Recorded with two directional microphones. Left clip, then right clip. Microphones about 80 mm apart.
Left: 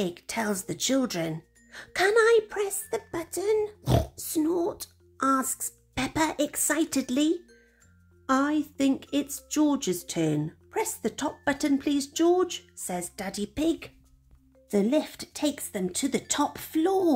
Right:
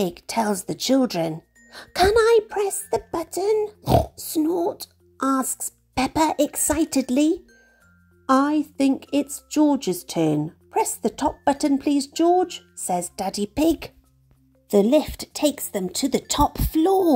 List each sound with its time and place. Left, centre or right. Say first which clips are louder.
0.0 s speech: right 7 dB; right
1.7 s speech: right 6 dB; right
8.5 s speech: right 5 dB; right
12.8 s speech: right 10 dB; right
14.7 s speech: right 8 dB; right